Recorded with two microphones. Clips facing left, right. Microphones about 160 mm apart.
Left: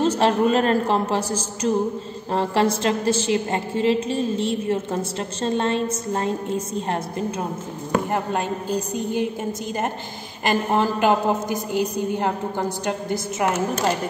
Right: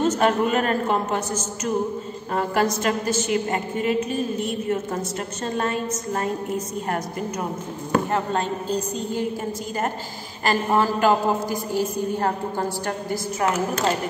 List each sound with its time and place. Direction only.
0.0 s a woman's voice: 30° left (ahead or behind)
8.1 s a woman's voice: 10° left (ahead or behind)
10.5 s a woman's voice: 20° left (ahead or behind)